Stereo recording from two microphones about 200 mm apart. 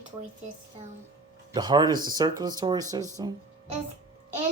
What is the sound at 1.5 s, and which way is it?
Speech, 20° right (ahead or behind).